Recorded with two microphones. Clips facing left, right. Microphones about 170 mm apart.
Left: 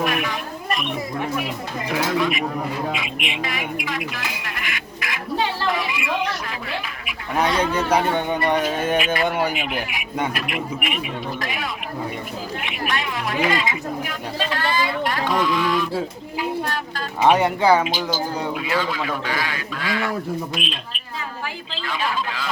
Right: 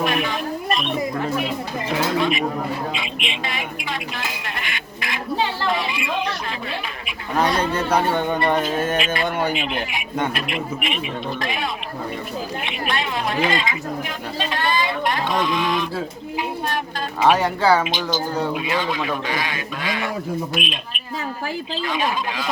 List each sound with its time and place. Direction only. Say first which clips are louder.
0.0 s a sound: right 2 dB; 25° right (ahead or behind)
1.4 s a man's voice: right 2 dB; 25° right (ahead or behind)
4.6 s a sound: even; 25° right (ahead or behind)
7.6 s speech: even; 15° left (ahead or behind)
9.5 s a man's voice: right 2 dB; 25° right (ahead or behind)
17.2 s speech: left 1 dB; 20° left (ahead or behind)
17.8 s a man's voice: even; 20° right (ahead or behind)